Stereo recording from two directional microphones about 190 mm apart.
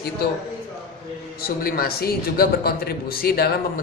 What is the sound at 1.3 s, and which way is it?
A man's voice, 50° left (ahead or behind).